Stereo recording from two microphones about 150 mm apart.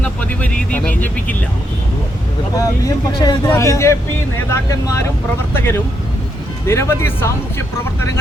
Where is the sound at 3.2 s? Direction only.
30° left (ahead or behind).